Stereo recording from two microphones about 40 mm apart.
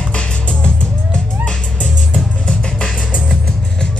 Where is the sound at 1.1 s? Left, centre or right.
Left.